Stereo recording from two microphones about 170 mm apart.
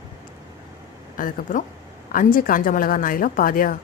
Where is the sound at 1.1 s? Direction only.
50° left (ahead or behind).